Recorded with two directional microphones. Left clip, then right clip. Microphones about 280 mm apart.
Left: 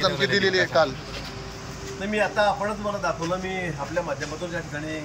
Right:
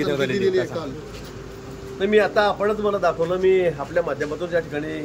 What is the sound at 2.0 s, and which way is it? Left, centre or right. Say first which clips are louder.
Speech: right 5 dB; right.